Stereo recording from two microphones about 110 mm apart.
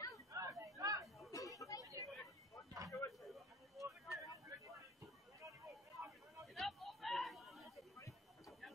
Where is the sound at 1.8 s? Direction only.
30° right (ahead or behind).